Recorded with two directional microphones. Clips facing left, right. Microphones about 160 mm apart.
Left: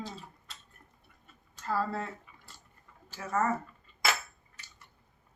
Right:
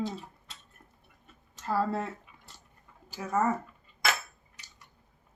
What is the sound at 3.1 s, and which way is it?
Speech, 10° right (ahead or behind).